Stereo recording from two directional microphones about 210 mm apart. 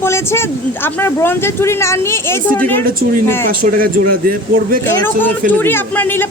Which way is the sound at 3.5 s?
45° right (ahead or behind).